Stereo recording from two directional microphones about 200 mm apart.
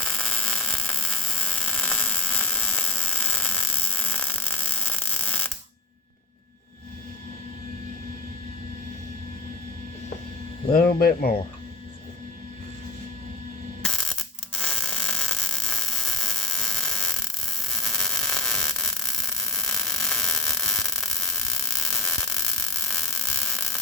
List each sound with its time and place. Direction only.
0.0 s static: 5° left (ahead or behind)
10.7 s speech: 50° left (ahead or behind)
13.8 s static: centre (ahead or behind)